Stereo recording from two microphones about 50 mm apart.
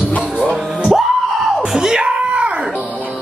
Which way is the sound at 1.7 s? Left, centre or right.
Centre.